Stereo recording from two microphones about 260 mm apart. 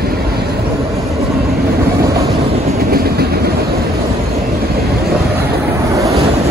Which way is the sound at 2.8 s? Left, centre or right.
Right.